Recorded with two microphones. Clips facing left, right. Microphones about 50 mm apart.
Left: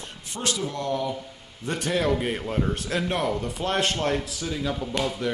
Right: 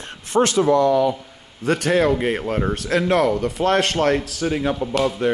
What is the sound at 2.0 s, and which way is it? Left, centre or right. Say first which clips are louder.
A man's voice: right 6 dB; right.